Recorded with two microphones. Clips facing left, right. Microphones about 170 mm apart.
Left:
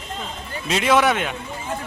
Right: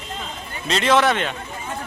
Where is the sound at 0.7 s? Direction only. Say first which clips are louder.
Even; 10° left (ahead or behind).